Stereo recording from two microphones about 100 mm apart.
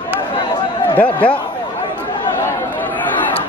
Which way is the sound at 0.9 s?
15° left (ahead or behind).